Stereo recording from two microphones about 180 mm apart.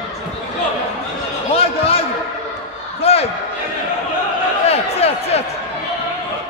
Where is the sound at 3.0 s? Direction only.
35° left (ahead or behind).